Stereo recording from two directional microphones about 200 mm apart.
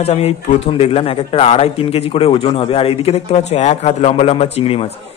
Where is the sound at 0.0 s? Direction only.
30° left (ahead or behind).